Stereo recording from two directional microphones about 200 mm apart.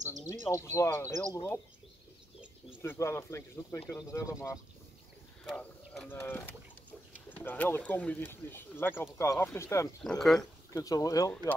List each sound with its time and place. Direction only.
0.5 s speech: 15° left (ahead or behind)
2.8 s speech: 15° left (ahead or behind)
5.4 s a sound: 5° left (ahead or behind)
7.2 s speech: 10° left (ahead or behind)
10.0 s speech: centre (ahead or behind)
10.7 s speech: 15° left (ahead or behind)